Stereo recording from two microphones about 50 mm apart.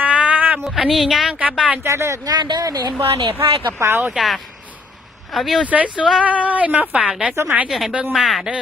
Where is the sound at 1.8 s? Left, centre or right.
Right.